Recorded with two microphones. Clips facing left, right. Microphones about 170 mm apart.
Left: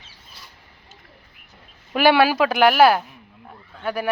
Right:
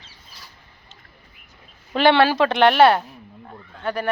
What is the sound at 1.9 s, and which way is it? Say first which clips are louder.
Speech: even; 10° left (ahead or behind).